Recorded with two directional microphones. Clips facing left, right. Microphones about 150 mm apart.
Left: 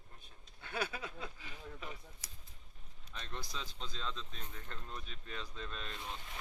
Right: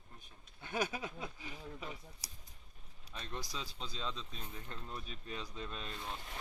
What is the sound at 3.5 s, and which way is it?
Speech, 10° right (ahead or behind).